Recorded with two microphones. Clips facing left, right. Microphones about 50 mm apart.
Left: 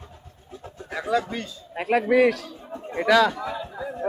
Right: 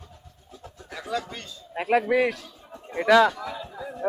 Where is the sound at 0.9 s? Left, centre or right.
Left.